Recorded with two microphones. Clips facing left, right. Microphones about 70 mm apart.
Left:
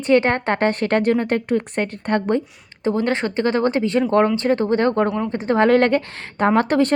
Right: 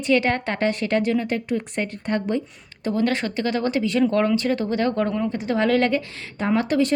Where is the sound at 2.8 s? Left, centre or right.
Left.